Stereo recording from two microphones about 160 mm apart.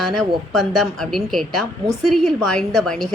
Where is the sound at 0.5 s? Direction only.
Centre (ahead or behind).